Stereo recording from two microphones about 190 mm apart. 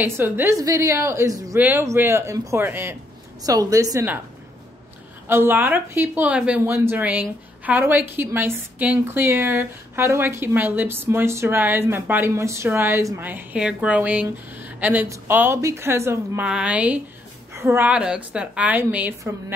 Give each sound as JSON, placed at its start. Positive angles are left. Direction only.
{"t": 0.0, "sound": "speech", "side_deg": -10}
{"t": 5.3, "sound": "speech", "side_deg": -10}